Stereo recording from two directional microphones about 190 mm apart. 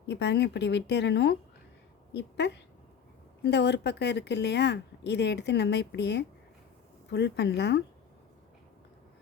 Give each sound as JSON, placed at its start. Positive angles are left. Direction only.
{"t": 0.1, "sound": "speech", "side_deg": 65}